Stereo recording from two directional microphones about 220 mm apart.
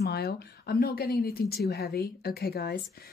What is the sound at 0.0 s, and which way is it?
Speech, 45° left (ahead or behind).